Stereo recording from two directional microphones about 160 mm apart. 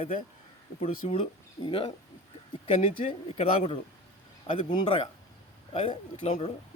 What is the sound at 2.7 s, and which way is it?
Speech, 45° left (ahead or behind).